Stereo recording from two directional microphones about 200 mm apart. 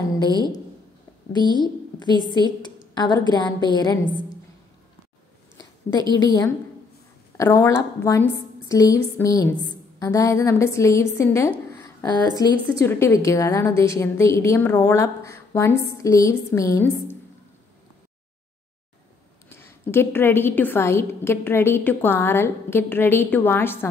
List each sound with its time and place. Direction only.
1.5 s a woman's voice: 20° left (ahead or behind)
2.2 s a woman's voice: 20° right (ahead or behind)
2.6 s a woman's voice: 20° left (ahead or behind)
6.2 s a woman's voice: 20° left (ahead or behind)
11.7 s a sound: 15° left (ahead or behind)
12.5 s a woman's voice: 10° left (ahead or behind)
19.5 s a woman's voice: 10° left (ahead or behind)